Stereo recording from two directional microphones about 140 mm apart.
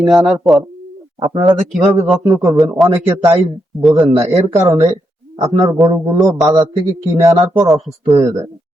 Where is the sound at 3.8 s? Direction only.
Centre (ahead or behind).